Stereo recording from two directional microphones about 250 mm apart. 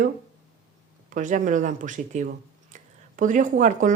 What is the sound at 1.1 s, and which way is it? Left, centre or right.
Speech, right.